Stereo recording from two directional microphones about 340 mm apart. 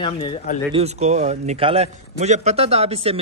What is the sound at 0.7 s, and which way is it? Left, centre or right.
A man's voice, centre.